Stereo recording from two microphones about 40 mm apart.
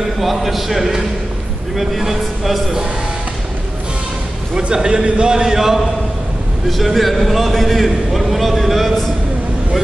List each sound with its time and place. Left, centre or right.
0.2 s a man's voice: centre
4.6 s a man's voice: centre
5.3 s a man's voice: centre
6.8 s a man's voice: centre